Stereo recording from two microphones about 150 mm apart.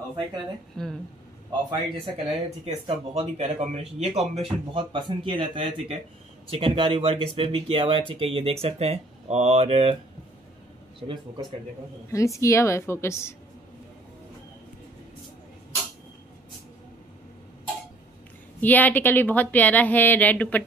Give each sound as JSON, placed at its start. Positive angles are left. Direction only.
{"t": 0.8, "sound": "speech", "side_deg": 5}
{"t": 1.7, "sound": "speech", "side_deg": -40}
{"t": 4.7, "sound": "speech", "side_deg": -35}
{"t": 12.1, "sound": "a woman's voice", "side_deg": 20}
{"t": 18.6, "sound": "speech", "side_deg": 10}